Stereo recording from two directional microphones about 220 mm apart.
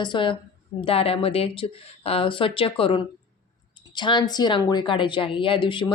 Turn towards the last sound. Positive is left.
turn(degrees=20)  # may be behind; listen again after turning